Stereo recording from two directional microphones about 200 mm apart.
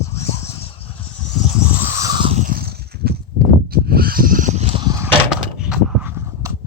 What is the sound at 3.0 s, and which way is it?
Horse, 55° right (ahead or behind).